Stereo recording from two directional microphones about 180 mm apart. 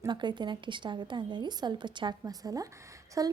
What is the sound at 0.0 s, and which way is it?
A woman's voice, 25° right (ahead or behind).